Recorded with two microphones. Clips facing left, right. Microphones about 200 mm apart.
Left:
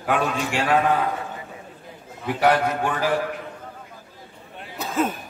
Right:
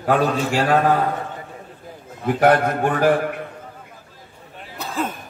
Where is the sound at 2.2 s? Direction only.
50° right (ahead or behind).